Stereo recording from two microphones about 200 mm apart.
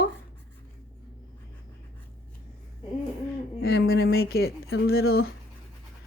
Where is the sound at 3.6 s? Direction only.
50° left (ahead or behind).